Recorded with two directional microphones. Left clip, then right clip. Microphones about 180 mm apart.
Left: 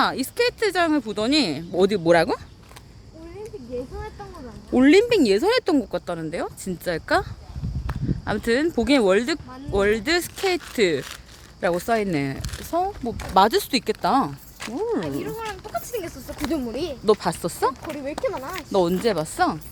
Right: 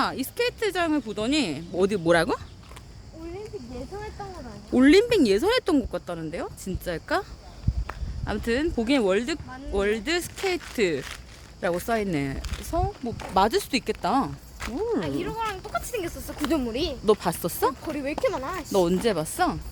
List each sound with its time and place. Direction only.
0.0 s speech: 35° left (ahead or behind)
1.8 s speech: 15° left (ahead or behind)
4.7 s speech: 5° left (ahead or behind)
5.9 s speech: 25° left (ahead or behind)
12.4 s speech: 60° left (ahead or behind)
12.7 s speech: 20° left (ahead or behind)
14.6 s speech: 40° left (ahead or behind)
15.0 s speech: centre (ahead or behind)